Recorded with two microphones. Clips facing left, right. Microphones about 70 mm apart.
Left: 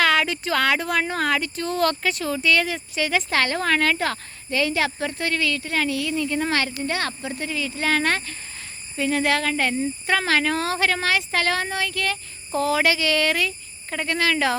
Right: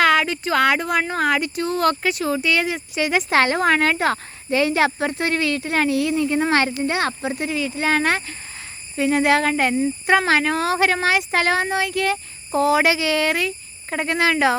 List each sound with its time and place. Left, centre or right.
0.0 s speech: centre
13.9 s speech: right